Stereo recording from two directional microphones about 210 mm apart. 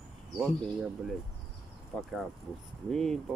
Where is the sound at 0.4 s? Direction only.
Centre (ahead or behind).